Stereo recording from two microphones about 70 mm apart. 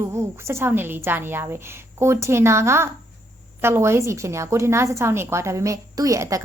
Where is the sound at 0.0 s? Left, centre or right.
Right.